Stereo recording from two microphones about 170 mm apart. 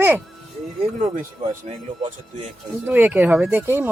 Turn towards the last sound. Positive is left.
turn(degrees=-10)  # may be behind; listen again after turning